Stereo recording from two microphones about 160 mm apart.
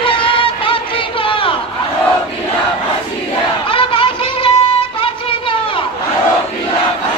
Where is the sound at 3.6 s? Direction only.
35° left (ahead or behind).